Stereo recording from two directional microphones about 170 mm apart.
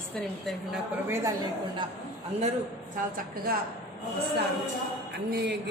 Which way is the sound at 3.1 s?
60° right (ahead or behind).